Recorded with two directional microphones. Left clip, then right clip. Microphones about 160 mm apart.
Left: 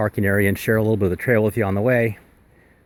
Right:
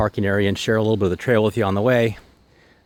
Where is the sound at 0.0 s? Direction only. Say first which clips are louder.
Even; 5° right (ahead or behind).